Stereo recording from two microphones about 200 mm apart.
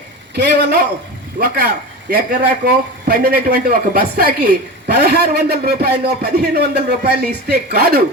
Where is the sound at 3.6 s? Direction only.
50° right (ahead or behind).